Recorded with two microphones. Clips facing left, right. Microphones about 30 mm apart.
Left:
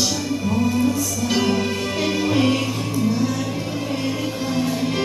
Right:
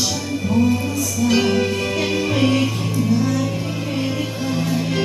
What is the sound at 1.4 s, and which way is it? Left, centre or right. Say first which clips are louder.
Music: even; centre.